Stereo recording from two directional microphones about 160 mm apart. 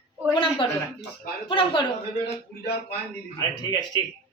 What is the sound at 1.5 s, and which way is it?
Speech, 30° left (ahead or behind).